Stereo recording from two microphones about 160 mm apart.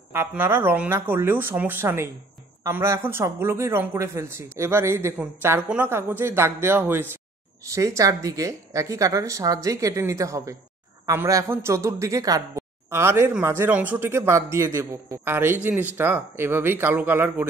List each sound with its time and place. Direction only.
0.1 s a woman's voice: 15° right (ahead or behind)